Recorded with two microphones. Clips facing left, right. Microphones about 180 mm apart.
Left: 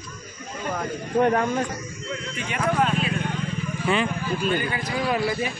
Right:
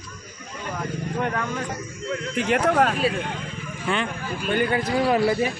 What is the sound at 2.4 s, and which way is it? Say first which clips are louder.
Speech: right 4 dB; 90° right.